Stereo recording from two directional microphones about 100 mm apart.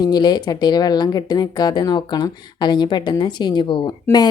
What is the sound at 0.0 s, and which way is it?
Speech, 40° left (ahead or behind).